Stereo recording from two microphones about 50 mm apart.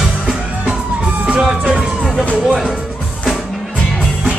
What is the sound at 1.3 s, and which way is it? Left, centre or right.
Music, centre.